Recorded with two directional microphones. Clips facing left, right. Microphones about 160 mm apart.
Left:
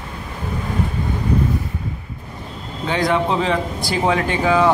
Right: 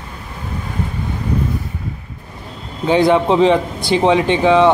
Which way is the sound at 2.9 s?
30° right (ahead or behind).